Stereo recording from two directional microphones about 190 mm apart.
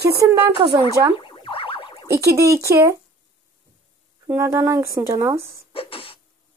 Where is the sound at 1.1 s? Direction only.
25° left (ahead or behind).